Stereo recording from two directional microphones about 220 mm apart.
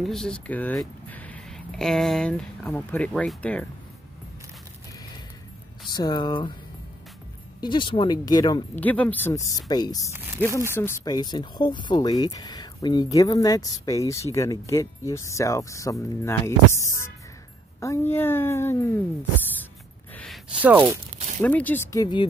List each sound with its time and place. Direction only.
0.0 s speech: centre (ahead or behind)
5.9 s speech: 20° left (ahead or behind)
7.6 s speech: 20° left (ahead or behind)
8.7 s speech: 5° left (ahead or behind)
10.1 s speech: 10° right (ahead or behind)
10.7 s speech: 10° left (ahead or behind)
20.6 s speech: 10° right (ahead or behind)
21.4 s speech: 5° left (ahead or behind)